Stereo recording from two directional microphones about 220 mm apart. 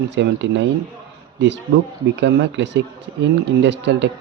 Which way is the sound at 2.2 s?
55° right (ahead or behind).